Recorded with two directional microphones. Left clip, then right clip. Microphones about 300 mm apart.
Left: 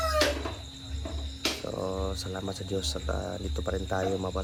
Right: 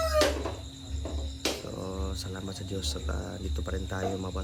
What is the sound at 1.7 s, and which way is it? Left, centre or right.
Speech, centre.